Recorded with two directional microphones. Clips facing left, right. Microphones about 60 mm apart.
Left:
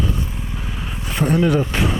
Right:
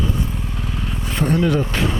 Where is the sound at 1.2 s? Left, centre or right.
Centre.